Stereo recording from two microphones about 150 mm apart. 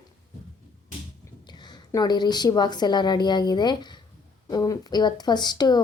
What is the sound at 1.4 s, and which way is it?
A woman's voice, 30° left (ahead or behind).